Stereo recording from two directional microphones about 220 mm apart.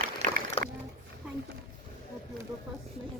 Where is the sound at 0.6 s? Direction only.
25° left (ahead or behind).